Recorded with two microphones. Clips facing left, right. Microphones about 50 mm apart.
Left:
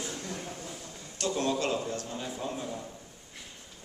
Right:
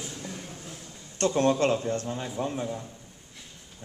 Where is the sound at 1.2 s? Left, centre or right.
Right.